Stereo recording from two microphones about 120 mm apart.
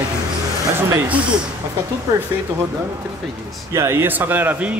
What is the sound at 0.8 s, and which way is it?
Speech, 20° right (ahead or behind).